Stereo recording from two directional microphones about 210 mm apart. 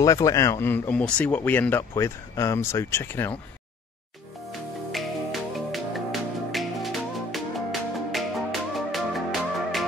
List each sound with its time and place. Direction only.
0.0 s speech: 15° left (ahead or behind)
4.5 s music: centre (ahead or behind)